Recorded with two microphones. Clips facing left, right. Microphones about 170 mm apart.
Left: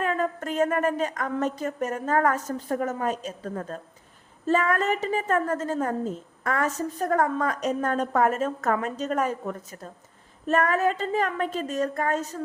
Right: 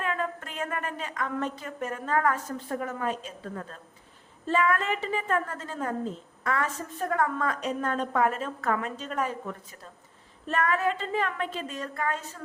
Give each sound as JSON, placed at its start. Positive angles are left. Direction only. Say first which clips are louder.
{"t": 0.0, "sound": "a woman's voice", "louder": "left 5 dB", "side_deg": 40}